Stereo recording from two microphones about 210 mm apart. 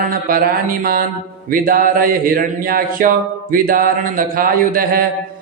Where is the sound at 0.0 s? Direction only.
45° right (ahead or behind).